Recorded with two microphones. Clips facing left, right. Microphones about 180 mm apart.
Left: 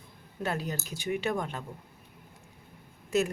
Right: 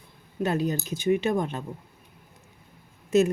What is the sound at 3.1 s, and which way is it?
Speech, 20° right (ahead or behind).